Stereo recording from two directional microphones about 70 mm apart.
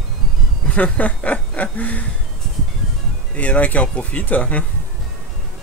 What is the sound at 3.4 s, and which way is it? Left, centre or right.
Speech, left.